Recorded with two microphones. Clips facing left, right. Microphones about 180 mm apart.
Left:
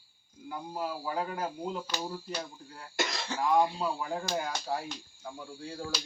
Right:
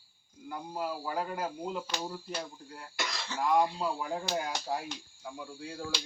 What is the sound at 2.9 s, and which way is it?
Speech, 50° left (ahead or behind).